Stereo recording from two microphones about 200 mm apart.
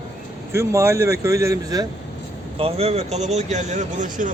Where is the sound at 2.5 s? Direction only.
30° right (ahead or behind).